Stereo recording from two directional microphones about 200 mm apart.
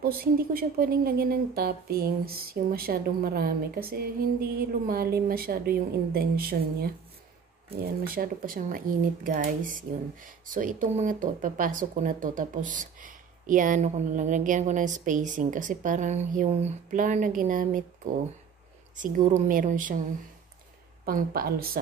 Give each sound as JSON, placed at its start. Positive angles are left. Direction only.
{"t": 0.0, "sound": "a woman's voice", "side_deg": -50}
{"t": 18.9, "sound": "speech", "side_deg": -40}
{"t": 21.0, "sound": "a woman's voice", "side_deg": -50}